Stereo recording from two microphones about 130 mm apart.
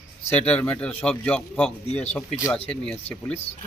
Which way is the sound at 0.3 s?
10° left (ahead or behind).